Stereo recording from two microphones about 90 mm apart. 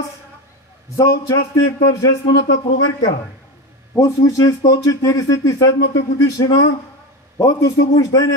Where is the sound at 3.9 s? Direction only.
40° left (ahead or behind).